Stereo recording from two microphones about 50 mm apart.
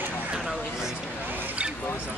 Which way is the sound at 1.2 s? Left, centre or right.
Right.